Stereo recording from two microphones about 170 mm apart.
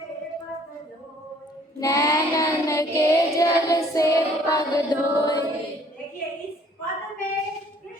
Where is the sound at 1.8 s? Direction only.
20° left (ahead or behind).